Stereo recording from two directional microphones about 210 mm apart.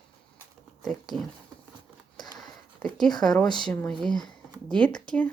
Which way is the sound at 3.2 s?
Centre (ahead or behind).